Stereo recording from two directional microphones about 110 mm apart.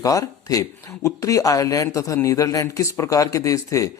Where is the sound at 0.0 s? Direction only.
30° left (ahead or behind).